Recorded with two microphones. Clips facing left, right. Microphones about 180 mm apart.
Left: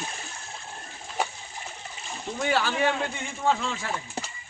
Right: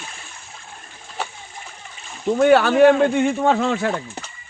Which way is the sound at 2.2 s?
65° right (ahead or behind).